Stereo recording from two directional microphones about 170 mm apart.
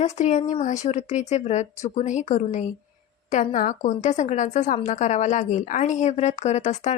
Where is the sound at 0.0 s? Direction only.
40° left (ahead or behind).